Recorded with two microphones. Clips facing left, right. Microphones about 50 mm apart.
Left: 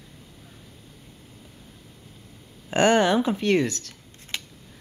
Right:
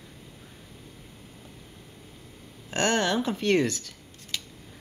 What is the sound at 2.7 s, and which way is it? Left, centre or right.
Speech, centre.